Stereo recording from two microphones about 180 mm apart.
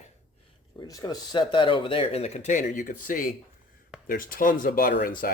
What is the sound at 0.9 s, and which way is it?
Speech, 20° left (ahead or behind).